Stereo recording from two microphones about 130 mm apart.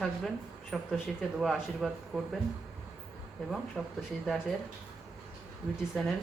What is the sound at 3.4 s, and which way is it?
Speech, centre (ahead or behind).